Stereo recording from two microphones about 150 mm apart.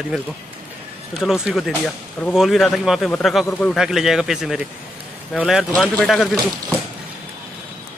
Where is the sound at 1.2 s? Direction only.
5° right (ahead or behind).